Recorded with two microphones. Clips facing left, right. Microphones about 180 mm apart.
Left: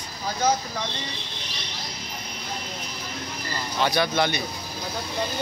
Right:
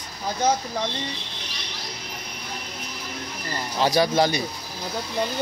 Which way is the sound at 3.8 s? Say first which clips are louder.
Right 3 dB; 35° right (ahead or behind).